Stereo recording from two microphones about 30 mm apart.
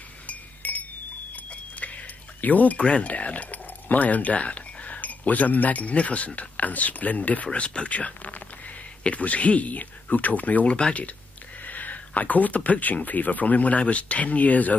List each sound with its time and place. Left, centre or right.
0.3 s chink: left
1.3 s a sound: left
2.4 s speech: left
2.8 s speech: left
3.1 s speech: left
7.5 s speech: left
7.9 s speech: left
10.7 s speech: left
11.6 s speech: left